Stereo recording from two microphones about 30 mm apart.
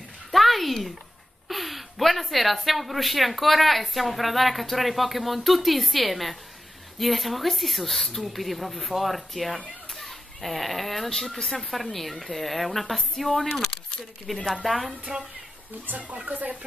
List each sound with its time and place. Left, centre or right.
0.3 s a sound: centre
1.5 s speech: centre
9.9 s children playing: centre
11.7 s speech: centre
14.5 s speech: centre
15.1 s speech: right
15.9 s speech: right